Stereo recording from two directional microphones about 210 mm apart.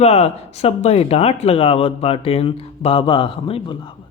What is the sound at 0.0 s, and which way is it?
Speech, 30° left (ahead or behind).